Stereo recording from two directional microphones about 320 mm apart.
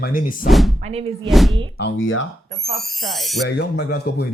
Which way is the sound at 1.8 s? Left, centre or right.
Left.